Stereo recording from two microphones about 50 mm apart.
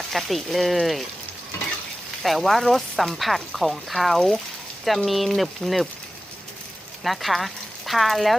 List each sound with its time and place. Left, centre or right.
0.1 s speech: centre
2.2 s speech: centre
7.0 s speech: centre